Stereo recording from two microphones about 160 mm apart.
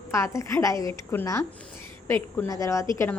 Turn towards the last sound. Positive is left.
turn(degrees=15)  # may be behind; listen again after turning